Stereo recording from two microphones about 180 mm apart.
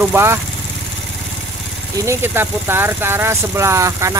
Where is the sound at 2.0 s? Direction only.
15° right (ahead or behind).